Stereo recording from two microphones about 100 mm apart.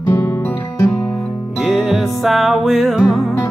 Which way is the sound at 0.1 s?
25° left (ahead or behind).